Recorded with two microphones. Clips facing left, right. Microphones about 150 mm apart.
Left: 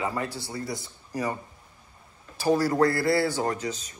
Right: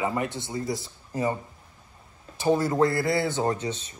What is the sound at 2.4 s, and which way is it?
A man's voice, 20° right (ahead or behind).